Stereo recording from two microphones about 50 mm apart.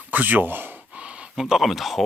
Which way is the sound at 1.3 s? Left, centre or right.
Centre.